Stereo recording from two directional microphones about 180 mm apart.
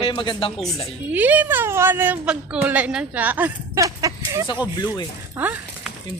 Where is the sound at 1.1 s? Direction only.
10° right (ahead or behind).